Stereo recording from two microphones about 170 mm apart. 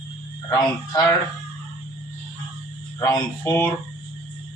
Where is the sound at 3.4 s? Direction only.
15° left (ahead or behind).